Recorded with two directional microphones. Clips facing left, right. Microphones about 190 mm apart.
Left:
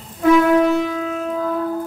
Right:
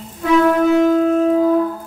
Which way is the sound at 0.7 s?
50° right (ahead or behind).